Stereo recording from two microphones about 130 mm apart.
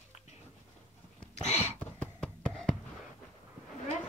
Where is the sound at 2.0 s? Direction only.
5° left (ahead or behind).